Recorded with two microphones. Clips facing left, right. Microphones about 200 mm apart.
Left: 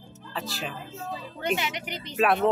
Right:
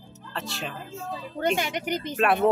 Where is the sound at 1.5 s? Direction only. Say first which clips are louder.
Right 5 dB; 45° right (ahead or behind).